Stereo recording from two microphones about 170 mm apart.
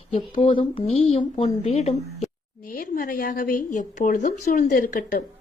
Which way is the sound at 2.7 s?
55° left (ahead or behind).